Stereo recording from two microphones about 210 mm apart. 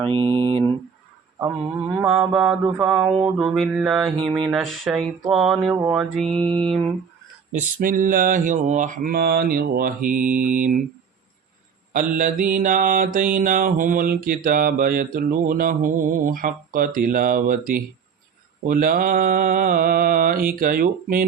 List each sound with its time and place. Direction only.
0.0 s mantra: 25° right (ahead or behind)
1.9 s mantra: 10° right (ahead or behind)
6.4 s mantra: 25° right (ahead or behind)
7.5 s mantra: 40° right (ahead or behind)
11.9 s mantra: 40° right (ahead or behind)